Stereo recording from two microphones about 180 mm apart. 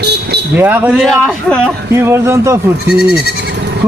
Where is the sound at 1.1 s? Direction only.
Centre (ahead or behind).